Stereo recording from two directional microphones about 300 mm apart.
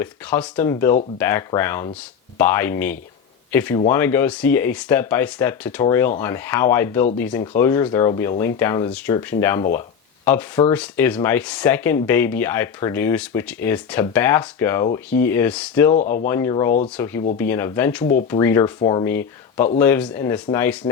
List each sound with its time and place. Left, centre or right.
0.0 s speech: centre
18.0 s speech: left
18.3 s speech: centre